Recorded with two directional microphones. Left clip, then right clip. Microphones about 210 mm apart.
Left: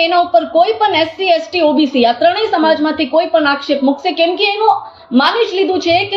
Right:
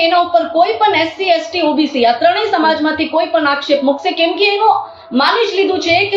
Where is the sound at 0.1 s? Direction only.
45° left (ahead or behind).